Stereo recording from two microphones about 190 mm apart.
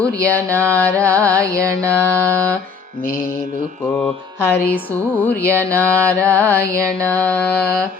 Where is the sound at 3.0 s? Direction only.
50° left (ahead or behind).